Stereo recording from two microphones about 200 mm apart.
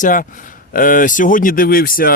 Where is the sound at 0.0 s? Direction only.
40° left (ahead or behind).